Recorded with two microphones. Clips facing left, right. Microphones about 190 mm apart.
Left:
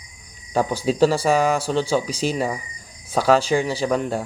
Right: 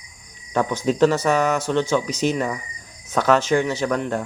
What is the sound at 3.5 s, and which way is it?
Speech, 15° left (ahead or behind).